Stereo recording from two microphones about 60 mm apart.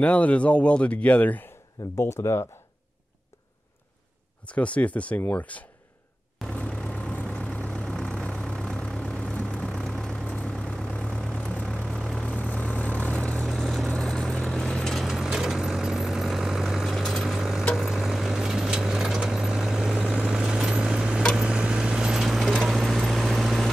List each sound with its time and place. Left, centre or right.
0.0 s speech: left
2.0 s speech: left
4.5 s speech: left
6.5 s vehicle: centre
9.7 s vehicle: centre
10.2 s vehicle: left
13.5 s vehicle: centre
15.0 s vehicle: centre